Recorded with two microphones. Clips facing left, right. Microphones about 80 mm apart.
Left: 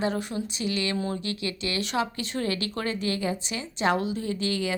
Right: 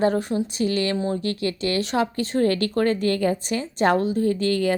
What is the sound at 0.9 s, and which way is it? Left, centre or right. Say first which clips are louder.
Speech: right 5 dB; right.